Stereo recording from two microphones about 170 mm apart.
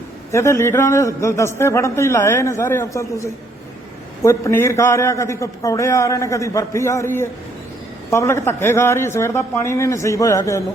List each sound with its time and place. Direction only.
0.3 s a man's voice: 15° left (ahead or behind)